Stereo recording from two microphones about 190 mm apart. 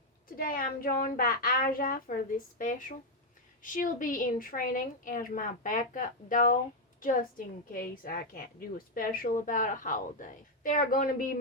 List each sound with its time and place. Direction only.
0.3 s a woman's voice: 50° left (ahead or behind)